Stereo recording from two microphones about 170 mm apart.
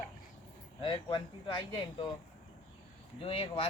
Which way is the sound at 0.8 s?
30° left (ahead or behind).